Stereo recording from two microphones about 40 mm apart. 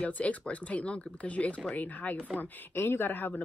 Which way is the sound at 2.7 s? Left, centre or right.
Left.